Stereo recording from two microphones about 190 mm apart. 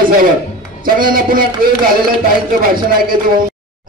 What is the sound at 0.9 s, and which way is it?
A man's voice, 50° right (ahead or behind).